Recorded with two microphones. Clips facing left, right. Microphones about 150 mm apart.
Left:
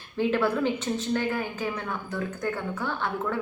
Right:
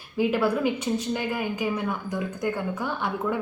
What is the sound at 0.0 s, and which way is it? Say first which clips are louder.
A woman's voice: right 1 dB; 10° right (ahead or behind).